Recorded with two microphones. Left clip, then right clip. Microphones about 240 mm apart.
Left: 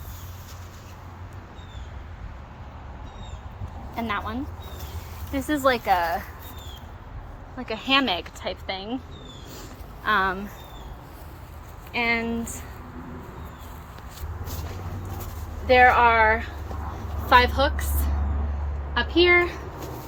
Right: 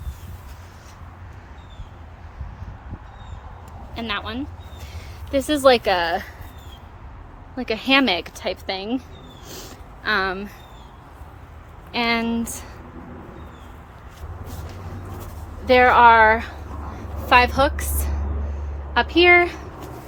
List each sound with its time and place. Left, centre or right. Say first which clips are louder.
3.9 s speech: right 1 dB; centre
5.3 s a woman's voice: right 7 dB; right
7.5 s speech: right 4 dB; right
10.0 s speech: right 1 dB; centre
11.9 s speech: right 3 dB; right
15.6 s speech: right 4 dB; right
17.2 s a woman's voice: right 2 dB; centre
18.9 s speech: right 5 dB; centre